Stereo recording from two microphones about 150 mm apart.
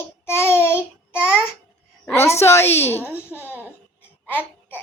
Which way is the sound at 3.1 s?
10° right (ahead or behind).